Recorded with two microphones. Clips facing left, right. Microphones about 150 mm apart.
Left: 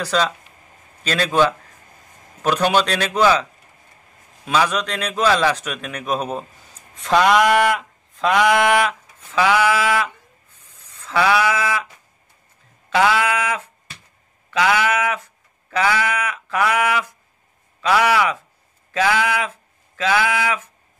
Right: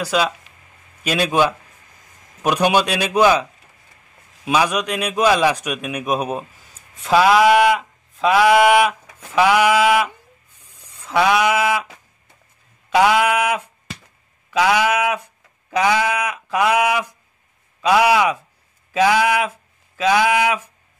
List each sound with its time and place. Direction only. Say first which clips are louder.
0.0 s a man's voice: right 1 dB; 10° right (ahead or behind)
4.5 s a man's voice: right 1 dB; 15° right (ahead or behind)
7.0 s a sound: right 2 dB; 5° right (ahead or behind)
9.3 s a man's voice: right 2 dB; 15° right (ahead or behind)
10.6 s sheep: even; 15° right (ahead or behind)
12.9 s a sound: right 3 dB; 15° right (ahead or behind)
17.8 s a man's voice: right 2 dB; 15° right (ahead or behind)